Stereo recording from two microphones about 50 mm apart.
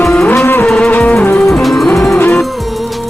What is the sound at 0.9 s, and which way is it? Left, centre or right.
Music, left.